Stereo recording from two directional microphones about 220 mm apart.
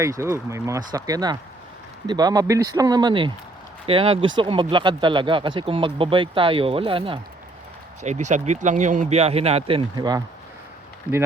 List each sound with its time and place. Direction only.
0.0 s speech: 15° right (ahead or behind)
11.1 s speech: 5° right (ahead or behind)